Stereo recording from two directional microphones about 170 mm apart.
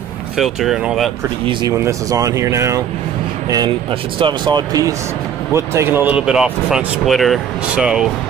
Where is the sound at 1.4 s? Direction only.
30° right (ahead or behind).